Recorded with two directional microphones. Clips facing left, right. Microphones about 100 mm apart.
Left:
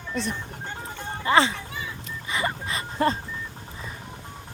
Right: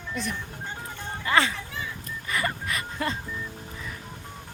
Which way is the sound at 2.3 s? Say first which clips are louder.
Left 1 dB; 20° left (ahead or behind).